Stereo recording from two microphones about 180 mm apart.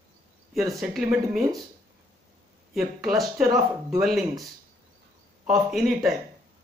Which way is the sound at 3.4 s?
20° right (ahead or behind).